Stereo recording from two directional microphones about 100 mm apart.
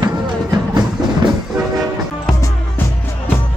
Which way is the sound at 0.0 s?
40° right (ahead or behind).